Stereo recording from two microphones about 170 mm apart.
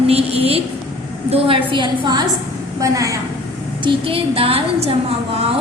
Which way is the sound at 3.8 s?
30° right (ahead or behind).